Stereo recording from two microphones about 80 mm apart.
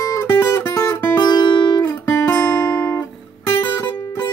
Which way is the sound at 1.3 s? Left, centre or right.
Left.